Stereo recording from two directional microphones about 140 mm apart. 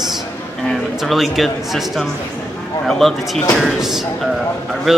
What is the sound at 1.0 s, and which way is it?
Speech, centre (ahead or behind).